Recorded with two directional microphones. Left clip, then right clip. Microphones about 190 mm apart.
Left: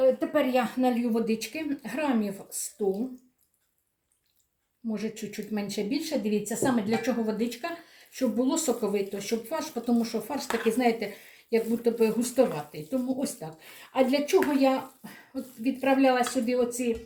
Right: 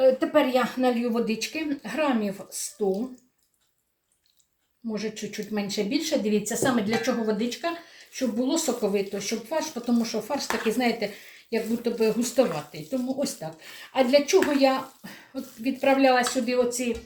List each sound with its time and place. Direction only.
0.0 s speech: 15° left (ahead or behind)
4.9 s speech: 15° left (ahead or behind)